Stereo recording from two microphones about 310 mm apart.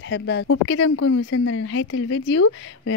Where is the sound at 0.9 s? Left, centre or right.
Left.